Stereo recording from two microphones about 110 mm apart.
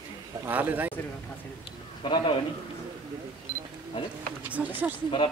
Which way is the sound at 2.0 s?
50° left (ahead or behind).